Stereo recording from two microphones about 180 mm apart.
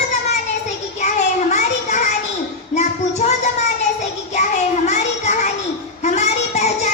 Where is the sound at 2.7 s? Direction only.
40° left (ahead or behind).